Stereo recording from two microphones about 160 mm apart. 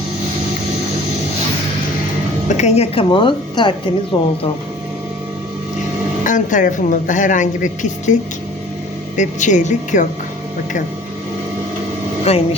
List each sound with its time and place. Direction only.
2.6 s a woman's voice: 45° left (ahead or behind)
6.2 s a woman's voice: 55° left (ahead or behind)
12.3 s a woman's voice: 40° left (ahead or behind)